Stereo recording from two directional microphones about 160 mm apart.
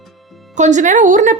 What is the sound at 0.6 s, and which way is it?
Speech, 50° right (ahead or behind).